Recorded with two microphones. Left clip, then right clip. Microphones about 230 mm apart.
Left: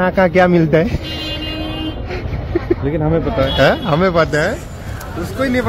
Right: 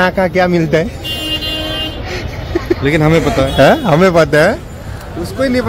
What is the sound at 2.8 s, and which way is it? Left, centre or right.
Speech, right.